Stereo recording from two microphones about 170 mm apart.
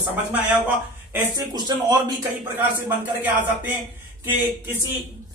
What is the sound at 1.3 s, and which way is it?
Speech, 25° right (ahead or behind).